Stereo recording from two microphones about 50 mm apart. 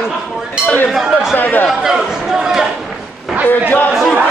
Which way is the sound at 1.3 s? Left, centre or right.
Left.